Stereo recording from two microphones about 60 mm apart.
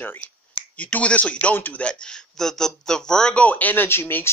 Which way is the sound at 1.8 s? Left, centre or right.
Centre.